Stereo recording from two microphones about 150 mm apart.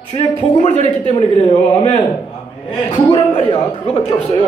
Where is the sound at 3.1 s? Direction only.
35° left (ahead or behind).